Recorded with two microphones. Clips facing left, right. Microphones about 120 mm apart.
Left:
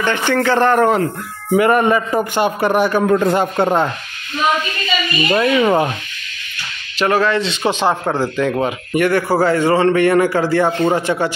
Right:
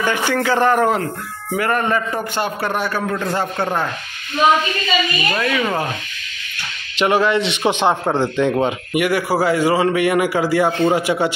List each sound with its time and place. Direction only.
0.0 s a man's voice: 10° right (ahead or behind)
1.6 s a man's voice: 15° left (ahead or behind)
5.3 s speech: 25° left (ahead or behind)
7.0 s a man's voice: 20° right (ahead or behind)
8.9 s a man's voice: 10° right (ahead or behind)